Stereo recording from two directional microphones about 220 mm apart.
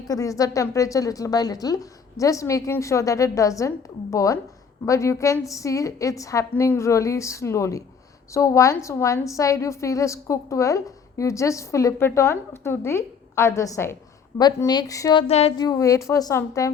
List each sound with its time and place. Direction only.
0.1 s a woman's voice: 15° left (ahead or behind)
15.3 s a woman's voice: 25° left (ahead or behind)